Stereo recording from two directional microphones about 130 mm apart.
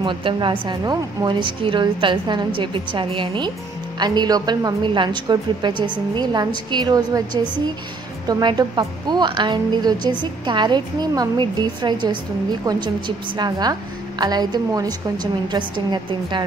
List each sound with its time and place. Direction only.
0.0 s a woman's voice: 40° right (ahead or behind)
8.3 s a woman's voice: 35° right (ahead or behind)